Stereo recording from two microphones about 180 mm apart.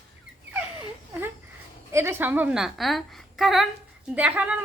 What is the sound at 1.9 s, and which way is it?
Speech, 15° right (ahead or behind).